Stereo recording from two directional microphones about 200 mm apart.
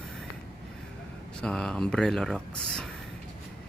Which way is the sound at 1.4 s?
5° left (ahead or behind).